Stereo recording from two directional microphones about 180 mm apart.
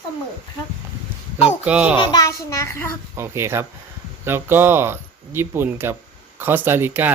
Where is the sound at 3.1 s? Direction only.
15° right (ahead or behind).